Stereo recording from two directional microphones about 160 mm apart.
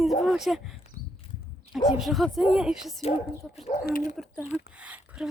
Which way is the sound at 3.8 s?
60° left (ahead or behind).